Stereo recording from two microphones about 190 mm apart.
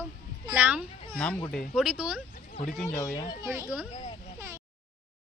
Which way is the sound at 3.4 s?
15° right (ahead or behind).